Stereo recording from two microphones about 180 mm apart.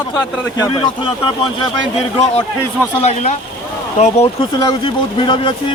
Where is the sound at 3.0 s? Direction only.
40° left (ahead or behind).